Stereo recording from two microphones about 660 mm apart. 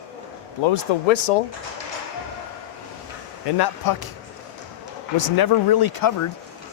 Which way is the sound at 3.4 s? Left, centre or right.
Left.